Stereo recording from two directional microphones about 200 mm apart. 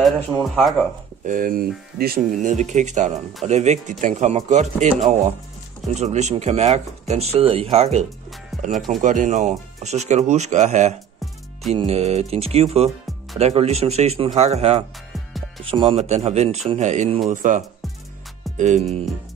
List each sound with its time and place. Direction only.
0.6 s speech: centre (ahead or behind)
1.2 s speech: 40° right (ahead or behind)
5.9 s speech: 35° right (ahead or behind)
9.0 s speech: 40° right (ahead or behind)